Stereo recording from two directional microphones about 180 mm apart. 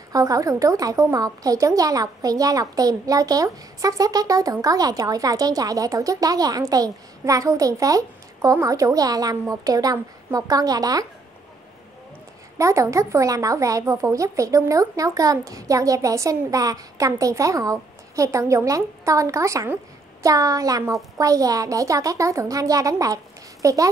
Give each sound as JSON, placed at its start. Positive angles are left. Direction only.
{"t": 0.1, "sound": "a woman's voice", "side_deg": -20}
{"t": 12.5, "sound": "speech", "side_deg": -15}